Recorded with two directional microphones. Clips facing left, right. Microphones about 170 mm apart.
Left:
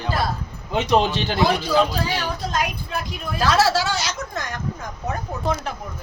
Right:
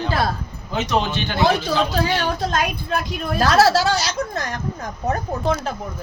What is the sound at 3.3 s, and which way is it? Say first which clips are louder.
Speech: right 3 dB; 45° right (ahead or behind).